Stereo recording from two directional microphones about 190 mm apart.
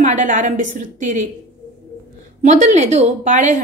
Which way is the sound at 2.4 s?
40° right (ahead or behind).